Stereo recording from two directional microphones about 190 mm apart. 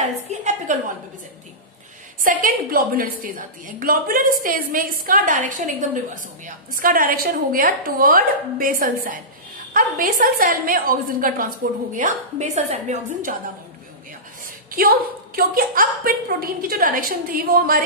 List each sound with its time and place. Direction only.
0.3 s a woman's voice: 40° right (ahead or behind)
2.2 s a woman's voice: 50° right (ahead or behind)
14.8 s a woman's voice: 50° right (ahead or behind)